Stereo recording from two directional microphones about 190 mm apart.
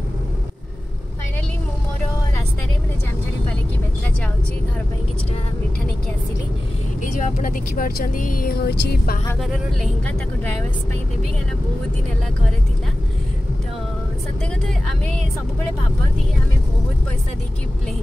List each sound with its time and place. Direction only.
7.0 s speech: 45° left (ahead or behind)
9.4 s speech: 5° left (ahead or behind)